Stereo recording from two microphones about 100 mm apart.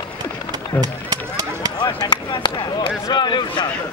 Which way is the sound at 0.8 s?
40° right (ahead or behind).